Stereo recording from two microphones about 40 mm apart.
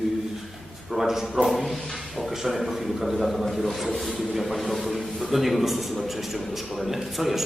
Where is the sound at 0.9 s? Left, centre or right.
Centre.